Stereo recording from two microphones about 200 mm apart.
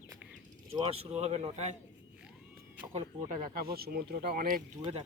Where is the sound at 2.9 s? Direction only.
40° right (ahead or behind).